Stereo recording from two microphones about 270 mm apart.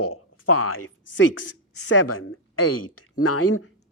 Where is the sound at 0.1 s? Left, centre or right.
Left.